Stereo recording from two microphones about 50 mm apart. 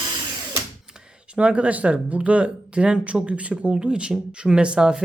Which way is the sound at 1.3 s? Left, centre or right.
Right.